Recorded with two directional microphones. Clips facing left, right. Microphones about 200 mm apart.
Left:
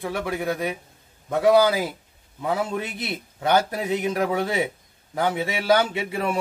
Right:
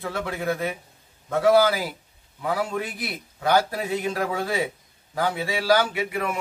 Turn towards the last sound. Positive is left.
turn(degrees=30)  # may be behind; listen again after turning